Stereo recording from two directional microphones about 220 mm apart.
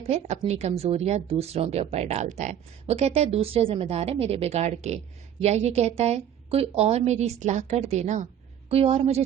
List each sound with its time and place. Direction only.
0.1 s speech: 30° right (ahead or behind)